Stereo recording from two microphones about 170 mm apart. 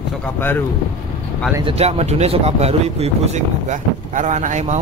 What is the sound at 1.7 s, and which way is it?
Speech, 40° right (ahead or behind).